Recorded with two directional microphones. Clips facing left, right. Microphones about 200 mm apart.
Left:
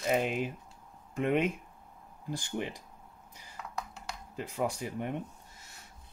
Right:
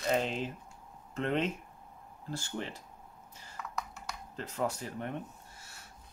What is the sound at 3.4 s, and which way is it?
Computer keyboard, 15° left (ahead or behind).